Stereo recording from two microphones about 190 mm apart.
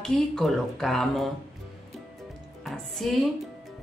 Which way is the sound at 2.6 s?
Centre (ahead or behind).